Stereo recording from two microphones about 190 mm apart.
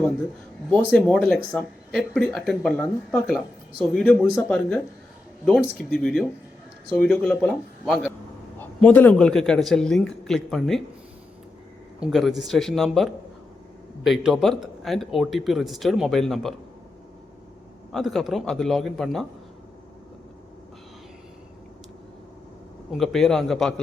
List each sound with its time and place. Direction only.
0.9 s speech: 5° left (ahead or behind)
11.9 s speech: centre (ahead or behind)
17.9 s speech: centre (ahead or behind)
22.9 s speech: centre (ahead or behind)